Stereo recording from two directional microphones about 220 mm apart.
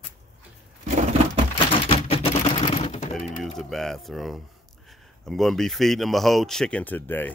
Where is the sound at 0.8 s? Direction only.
35° right (ahead or behind).